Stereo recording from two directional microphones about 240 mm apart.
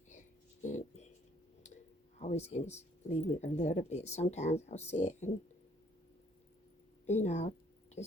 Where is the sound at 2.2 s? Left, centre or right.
Left.